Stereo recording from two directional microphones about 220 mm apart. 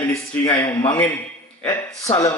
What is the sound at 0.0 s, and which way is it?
A man's voice, 10° left (ahead or behind).